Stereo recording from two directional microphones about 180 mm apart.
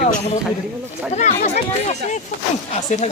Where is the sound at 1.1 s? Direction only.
40° left (ahead or behind).